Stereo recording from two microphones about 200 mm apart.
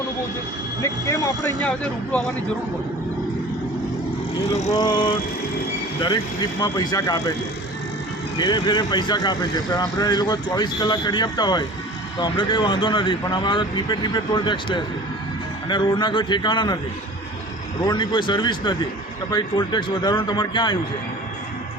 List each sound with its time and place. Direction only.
0.8 s speech: 15° left (ahead or behind)
4.7 s speech: 20° left (ahead or behind)
8.4 s speech: 20° left (ahead or behind)
17.8 s speech: 20° left (ahead or behind)